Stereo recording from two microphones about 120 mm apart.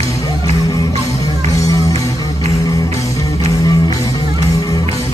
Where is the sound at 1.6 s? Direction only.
30° left (ahead or behind).